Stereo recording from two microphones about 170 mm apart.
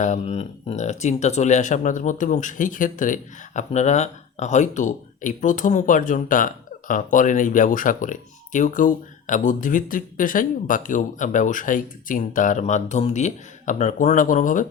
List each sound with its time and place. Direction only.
0.0 s speech: 45° left (ahead or behind)